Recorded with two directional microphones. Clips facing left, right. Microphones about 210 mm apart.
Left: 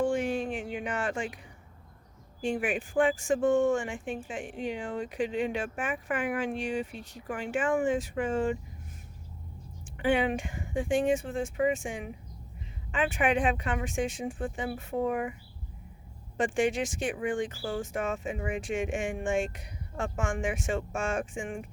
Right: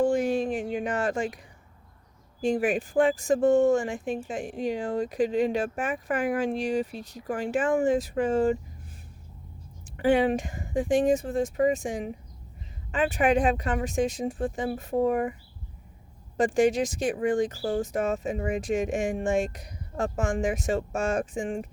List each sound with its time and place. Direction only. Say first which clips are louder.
0.0 s a sound: right 4 dB; 40° right (ahead or behind)
2.4 s speech: right 5 dB; 40° right (ahead or behind)
10.0 s speech: right 5 dB; 40° right (ahead or behind)
16.4 s speech: right 5 dB; 40° right (ahead or behind)